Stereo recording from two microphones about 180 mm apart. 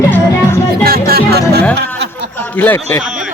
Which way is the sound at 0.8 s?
55° right (ahead or behind).